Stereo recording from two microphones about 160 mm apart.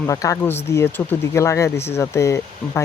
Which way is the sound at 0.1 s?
20° left (ahead or behind).